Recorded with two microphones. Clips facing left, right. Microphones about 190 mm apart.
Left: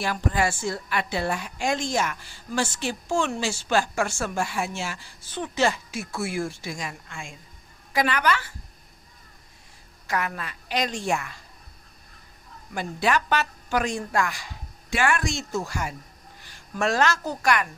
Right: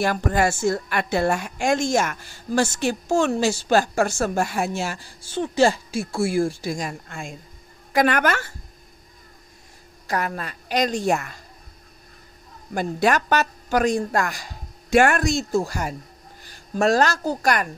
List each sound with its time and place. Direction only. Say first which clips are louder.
0.0 s a woman's voice: right 4 dB; 45° right (ahead or behind)
7.9 s a woman's voice: right 4 dB; 50° right (ahead or behind)
10.0 s a woman's voice: right 3 dB; 40° right (ahead or behind)
12.7 s a woman's voice: right 4 dB; 45° right (ahead or behind)